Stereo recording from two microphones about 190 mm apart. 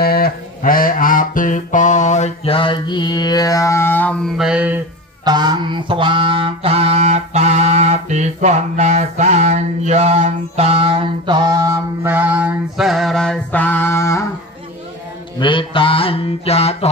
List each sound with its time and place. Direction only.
0.0 s music: 50° left (ahead or behind); by 4.1 s 10° left (ahead or behind)
4.4 s mantra: 5° right (ahead or behind)
5.2 s mantra: 20° right (ahead or behind); by 14.2 s 15° left (ahead or behind)
15.3 s mantra: 25° left (ahead or behind)